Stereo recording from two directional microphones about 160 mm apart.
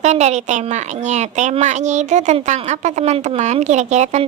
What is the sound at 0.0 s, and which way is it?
A woman's voice, 45° right (ahead or behind).